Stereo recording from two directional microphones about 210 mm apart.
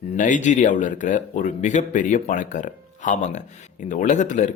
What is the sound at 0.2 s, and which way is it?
Speech, 35° left (ahead or behind).